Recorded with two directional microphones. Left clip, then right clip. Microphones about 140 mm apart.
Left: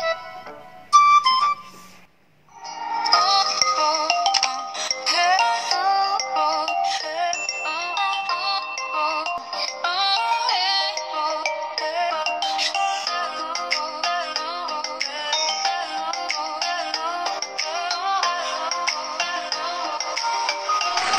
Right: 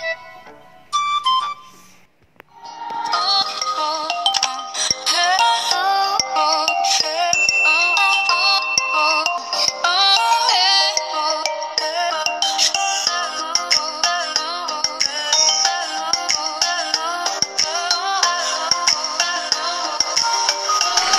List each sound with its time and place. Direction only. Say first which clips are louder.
0.9 s music: left 4 dB; 15° right (ahead or behind)
3.0 s music: even; 15° right (ahead or behind); by 21.2 s 40° right (ahead or behind)